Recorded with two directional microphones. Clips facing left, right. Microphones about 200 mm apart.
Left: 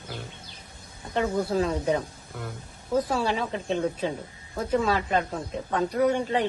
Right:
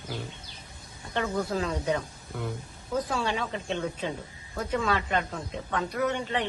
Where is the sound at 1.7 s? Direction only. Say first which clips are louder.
Left 3 dB; 30° left (ahead or behind).